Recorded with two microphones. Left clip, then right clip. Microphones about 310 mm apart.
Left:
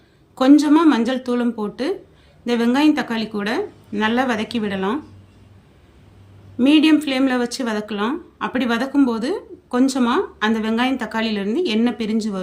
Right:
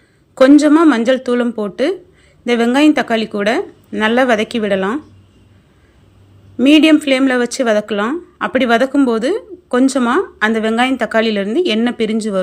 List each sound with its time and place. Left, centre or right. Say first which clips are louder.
0.3 s speech: right 5 dB; centre
6.6 s speech: right 5 dB; centre